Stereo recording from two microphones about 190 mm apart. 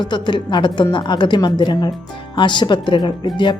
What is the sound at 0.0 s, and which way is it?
Speech, 25° left (ahead or behind).